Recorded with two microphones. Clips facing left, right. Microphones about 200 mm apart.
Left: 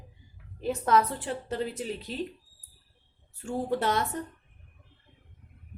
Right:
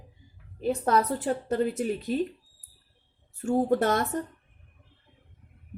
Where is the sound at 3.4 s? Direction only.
45° right (ahead or behind).